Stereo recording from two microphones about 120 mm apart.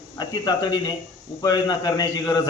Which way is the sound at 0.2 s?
35° left (ahead or behind).